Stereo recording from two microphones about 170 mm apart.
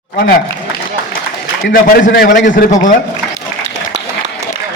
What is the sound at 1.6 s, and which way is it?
A man's voice, 65° left (ahead or behind).